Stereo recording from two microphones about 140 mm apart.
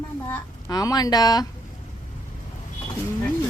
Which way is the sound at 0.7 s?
25° left (ahead or behind).